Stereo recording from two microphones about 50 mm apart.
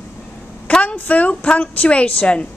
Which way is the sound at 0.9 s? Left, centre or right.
Left.